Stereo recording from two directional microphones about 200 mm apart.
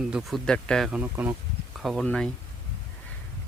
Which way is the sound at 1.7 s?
Centre (ahead or behind).